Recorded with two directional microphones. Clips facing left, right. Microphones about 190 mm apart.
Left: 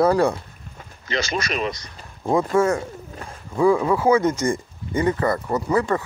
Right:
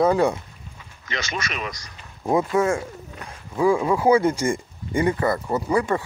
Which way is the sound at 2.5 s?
20° right (ahead or behind).